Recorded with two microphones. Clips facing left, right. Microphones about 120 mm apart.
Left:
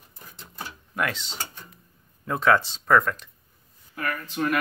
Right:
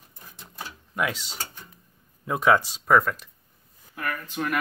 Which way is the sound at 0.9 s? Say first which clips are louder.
Even; 5° right (ahead or behind).